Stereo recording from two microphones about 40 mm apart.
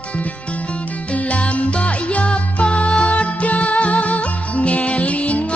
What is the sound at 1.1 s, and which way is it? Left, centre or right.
Music, left.